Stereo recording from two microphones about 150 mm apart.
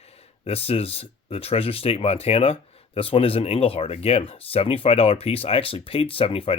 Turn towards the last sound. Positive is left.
turn(degrees=40)  # may be behind; listen again after turning